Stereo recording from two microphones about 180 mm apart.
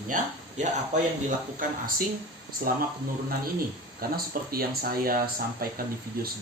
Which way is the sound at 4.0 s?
55° right (ahead or behind).